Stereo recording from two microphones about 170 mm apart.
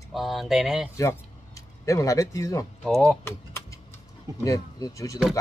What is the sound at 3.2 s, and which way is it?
Typing, 15° left (ahead or behind).